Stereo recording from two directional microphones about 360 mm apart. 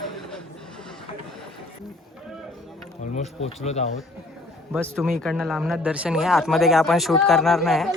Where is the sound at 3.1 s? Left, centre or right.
Centre.